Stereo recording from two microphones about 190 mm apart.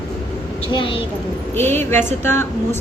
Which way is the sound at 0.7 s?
25° left (ahead or behind).